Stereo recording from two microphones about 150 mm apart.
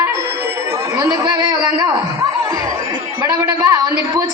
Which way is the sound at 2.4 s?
15° right (ahead or behind).